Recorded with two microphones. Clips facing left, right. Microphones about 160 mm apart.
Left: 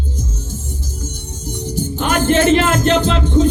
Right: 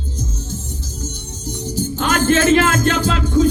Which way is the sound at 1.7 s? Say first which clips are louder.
Left 1 dB; 15° left (ahead or behind).